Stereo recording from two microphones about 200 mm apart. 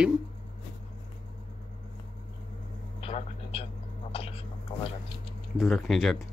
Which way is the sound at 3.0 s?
30° left (ahead or behind).